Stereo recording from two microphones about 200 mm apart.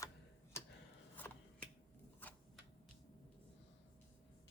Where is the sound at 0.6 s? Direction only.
15° left (ahead or behind).